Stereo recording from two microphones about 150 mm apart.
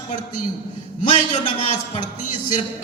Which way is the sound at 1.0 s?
50° left (ahead or behind).